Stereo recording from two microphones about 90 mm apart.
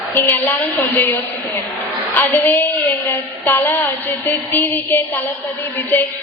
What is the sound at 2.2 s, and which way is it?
A woman's voice, 20° left (ahead or behind).